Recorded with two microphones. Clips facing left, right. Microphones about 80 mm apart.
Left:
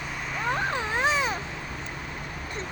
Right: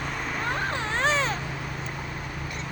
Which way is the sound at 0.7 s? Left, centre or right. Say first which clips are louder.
Even; centre.